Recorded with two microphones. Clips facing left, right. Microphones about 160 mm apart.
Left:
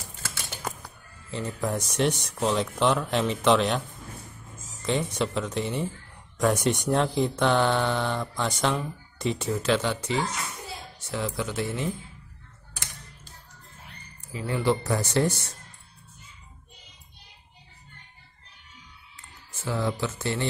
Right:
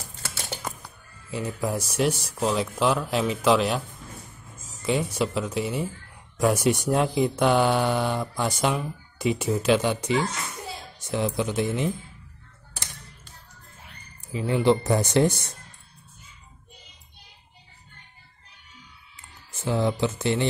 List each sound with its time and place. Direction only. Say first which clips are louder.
1.3 s speech: right 1 dB; 5° right (ahead or behind)
4.8 s speech: right 2 dB; 5° right (ahead or behind)
14.3 s speech: right 4 dB; 20° right (ahead or behind)
19.6 s speech: right 4 dB; 20° right (ahead or behind)